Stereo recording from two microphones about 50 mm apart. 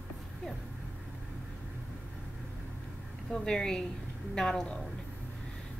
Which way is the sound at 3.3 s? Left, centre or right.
Centre.